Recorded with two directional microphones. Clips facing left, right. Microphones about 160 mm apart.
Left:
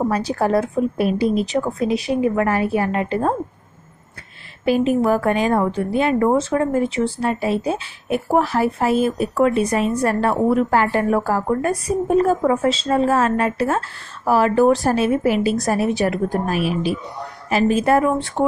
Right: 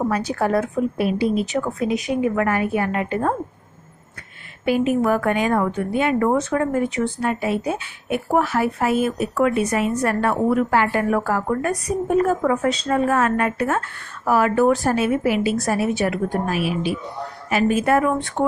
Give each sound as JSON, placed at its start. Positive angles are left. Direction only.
{"t": 0.1, "sound": "a woman's voice", "side_deg": 35}
{"t": 0.9, "sound": "a woman's voice", "side_deg": 45}
{"t": 4.6, "sound": "a woman's voice", "side_deg": 35}
{"t": 17.5, "sound": "a woman's voice", "side_deg": 30}
{"t": 18.1, "sound": "speech", "side_deg": 20}